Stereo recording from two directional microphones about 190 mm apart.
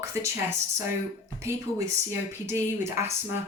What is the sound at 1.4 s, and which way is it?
Speech, 15° right (ahead or behind).